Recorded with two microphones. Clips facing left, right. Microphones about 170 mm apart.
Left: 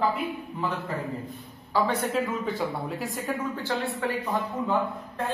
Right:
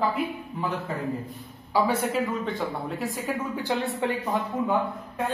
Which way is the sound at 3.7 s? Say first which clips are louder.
Right 3 dB; 20° right (ahead or behind).